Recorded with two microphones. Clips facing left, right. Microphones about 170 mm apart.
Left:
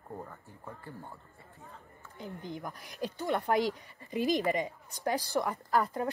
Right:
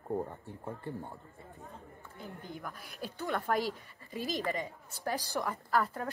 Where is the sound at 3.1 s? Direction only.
15° left (ahead or behind).